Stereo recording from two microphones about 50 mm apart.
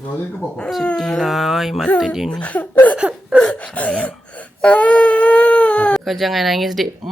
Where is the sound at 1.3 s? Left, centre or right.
Centre.